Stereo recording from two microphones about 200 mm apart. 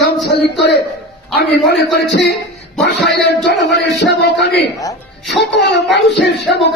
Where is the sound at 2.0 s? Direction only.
60° left (ahead or behind).